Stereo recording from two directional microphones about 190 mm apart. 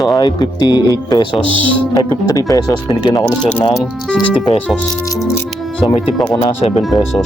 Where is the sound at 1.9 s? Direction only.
20° left (ahead or behind).